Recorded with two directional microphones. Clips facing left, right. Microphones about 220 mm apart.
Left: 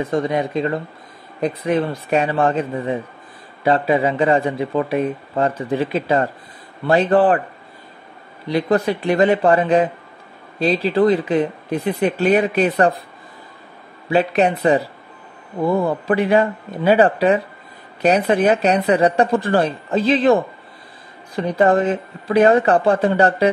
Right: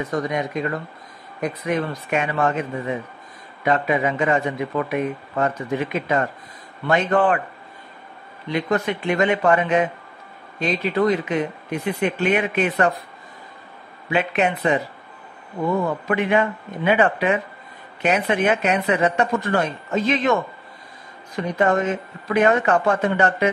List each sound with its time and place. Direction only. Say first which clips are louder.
0.0 s a man's voice: left 4 dB; 30° left (ahead or behind)
8.5 s a man's voice: left 4 dB; 35° left (ahead or behind)
14.0 s a man's voice: left 5 dB; 35° left (ahead or behind)